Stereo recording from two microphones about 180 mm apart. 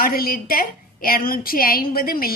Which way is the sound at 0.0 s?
55° left (ahead or behind).